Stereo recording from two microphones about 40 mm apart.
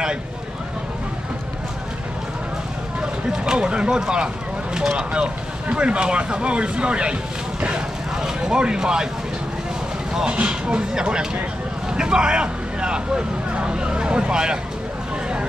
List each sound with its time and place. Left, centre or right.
3.0 s speech: right
8.2 s a sound: right
10.2 s speech: right